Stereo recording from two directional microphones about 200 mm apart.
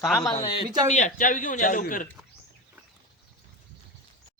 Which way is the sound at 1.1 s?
40° left (ahead or behind).